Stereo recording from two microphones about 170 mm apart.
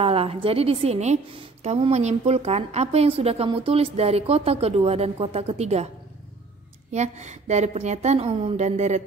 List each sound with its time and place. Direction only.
0.0 s a woman's voice: 35° right (ahead or behind)
6.9 s a woman's voice: 40° right (ahead or behind)